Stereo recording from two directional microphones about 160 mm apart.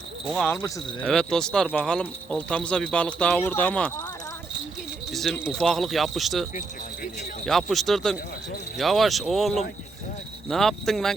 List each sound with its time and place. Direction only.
0.4 s speech: 15° left (ahead or behind)
1.0 s speech: centre (ahead or behind)
5.1 s speech: centre (ahead or behind)